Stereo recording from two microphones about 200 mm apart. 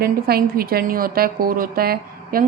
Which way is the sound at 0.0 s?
50° right (ahead or behind).